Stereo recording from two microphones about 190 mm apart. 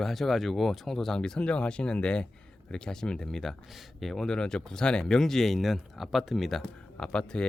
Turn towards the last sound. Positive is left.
turn(degrees=5)  # may be behind; listen again after turning